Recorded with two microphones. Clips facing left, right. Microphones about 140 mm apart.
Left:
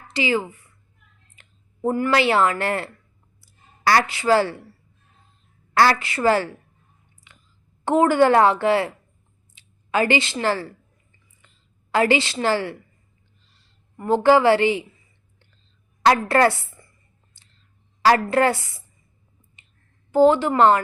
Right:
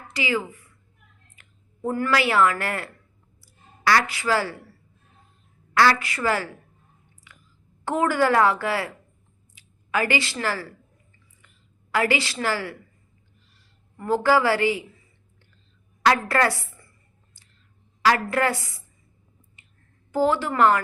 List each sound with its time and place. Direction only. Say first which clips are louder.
0.1 s a woman's voice: left 4 dB; 30° left (ahead or behind)
6.0 s a woman's voice: left 6 dB; 25° left (ahead or behind)
7.3 s a sound: right 1 dB; 25° left (ahead or behind)
7.9 s a woman's voice: left 5 dB; 25° left (ahead or behind)
16.0 s a woman's voice: left 4 dB; 30° left (ahead or behind)
17.4 s clicking: even; 25° left (ahead or behind)
18.0 s a woman's voice: left 4 dB; 30° left (ahead or behind)
19.6 s clicking: even; 20° left (ahead or behind)
20.1 s a woman's voice: left 6 dB; 25° left (ahead or behind)